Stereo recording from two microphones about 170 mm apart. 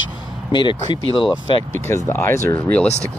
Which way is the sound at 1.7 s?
15° left (ahead or behind).